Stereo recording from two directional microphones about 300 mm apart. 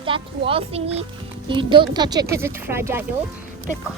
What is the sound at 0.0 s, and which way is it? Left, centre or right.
Speech, centre.